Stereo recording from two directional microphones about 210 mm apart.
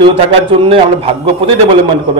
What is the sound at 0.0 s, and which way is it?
A man's voice, 25° right (ahead or behind).